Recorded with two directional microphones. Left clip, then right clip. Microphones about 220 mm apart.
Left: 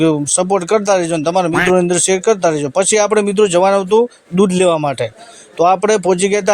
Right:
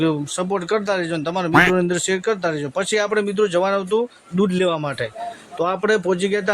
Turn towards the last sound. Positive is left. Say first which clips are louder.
# left 7 dB
turn(degrees=30)  # may be behind; listen again after turning